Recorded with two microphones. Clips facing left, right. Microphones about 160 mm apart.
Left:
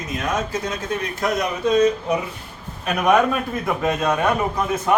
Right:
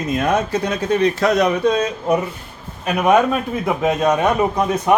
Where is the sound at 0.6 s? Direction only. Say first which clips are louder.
Right 8 dB; 75° right (ahead or behind).